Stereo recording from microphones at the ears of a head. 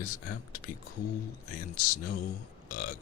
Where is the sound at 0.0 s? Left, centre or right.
Left.